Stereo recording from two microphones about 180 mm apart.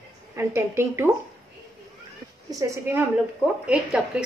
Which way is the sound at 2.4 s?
20° right (ahead or behind).